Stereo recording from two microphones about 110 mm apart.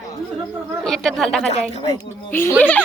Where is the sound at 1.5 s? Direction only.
70° left (ahead or behind).